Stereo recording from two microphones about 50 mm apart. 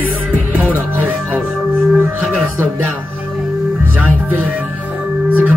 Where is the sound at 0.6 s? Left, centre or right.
Right.